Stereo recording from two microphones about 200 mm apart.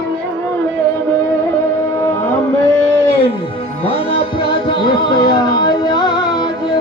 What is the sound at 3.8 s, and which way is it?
Music, 30° left (ahead or behind).